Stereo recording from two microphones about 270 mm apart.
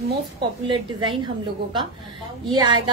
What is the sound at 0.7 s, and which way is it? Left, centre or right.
Speech, centre.